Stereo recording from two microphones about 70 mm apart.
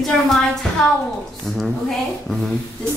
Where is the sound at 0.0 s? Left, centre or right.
Centre.